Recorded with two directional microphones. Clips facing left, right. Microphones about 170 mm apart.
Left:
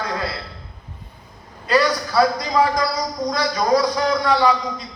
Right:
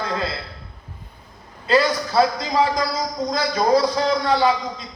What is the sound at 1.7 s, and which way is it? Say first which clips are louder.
A man's voice: even; 25° right (ahead or behind).